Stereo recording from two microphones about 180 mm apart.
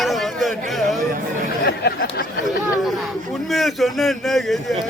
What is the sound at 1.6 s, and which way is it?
Speech, 60° left (ahead or behind).